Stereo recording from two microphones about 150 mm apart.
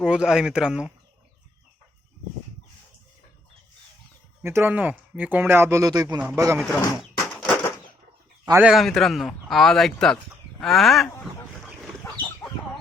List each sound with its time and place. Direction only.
0.0 s speech: 5° right (ahead or behind)
4.4 s speech: 15° right (ahead or behind)
6.6 s speech: 5° left (ahead or behind)
7.4 s a sound: 10° left (ahead or behind)
8.5 s speech: 5° right (ahead or behind)